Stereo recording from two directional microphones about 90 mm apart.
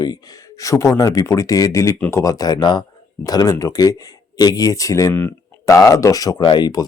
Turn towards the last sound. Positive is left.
turn(degrees=60)  # may be behind; listen again after turning